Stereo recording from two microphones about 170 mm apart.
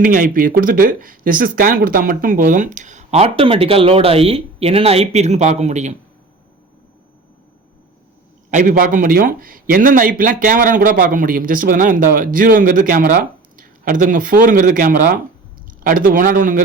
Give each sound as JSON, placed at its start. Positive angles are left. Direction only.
{"t": 0.0, "sound": "a man's voice", "side_deg": -50}
{"t": 8.4, "sound": "a man's voice", "side_deg": -50}